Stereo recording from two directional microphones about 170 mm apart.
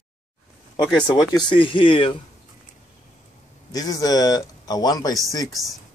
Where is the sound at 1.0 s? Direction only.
25° left (ahead or behind).